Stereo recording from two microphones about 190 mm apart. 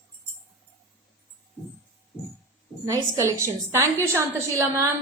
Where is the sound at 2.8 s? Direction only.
15° right (ahead or behind).